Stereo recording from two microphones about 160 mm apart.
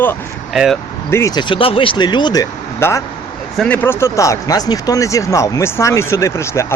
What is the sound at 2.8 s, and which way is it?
Speech, 15° left (ahead or behind).